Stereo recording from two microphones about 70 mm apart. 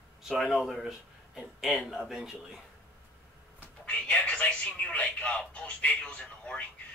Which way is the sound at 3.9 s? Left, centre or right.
Centre.